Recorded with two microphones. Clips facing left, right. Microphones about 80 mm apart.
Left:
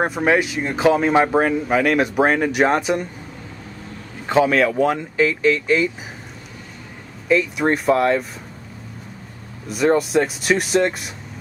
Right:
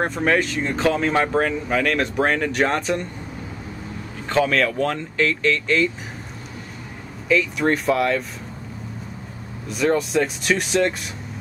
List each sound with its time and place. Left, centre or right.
0.0 s speech: centre
4.3 s speech: centre
7.6 s speech: centre
9.9 s speech: centre